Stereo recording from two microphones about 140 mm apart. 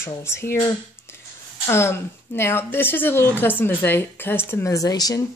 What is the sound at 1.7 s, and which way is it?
Speech, 20° left (ahead or behind).